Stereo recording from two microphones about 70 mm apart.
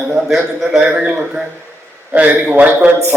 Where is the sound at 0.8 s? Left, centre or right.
Centre.